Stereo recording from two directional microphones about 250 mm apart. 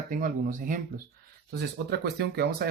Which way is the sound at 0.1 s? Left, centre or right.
Right.